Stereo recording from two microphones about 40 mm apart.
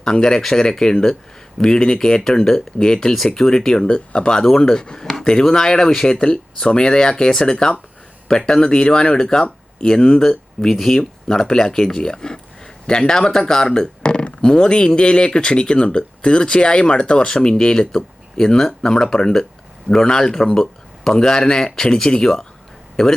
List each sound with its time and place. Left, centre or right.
0.0 s speech: centre
4.4 s speech: centre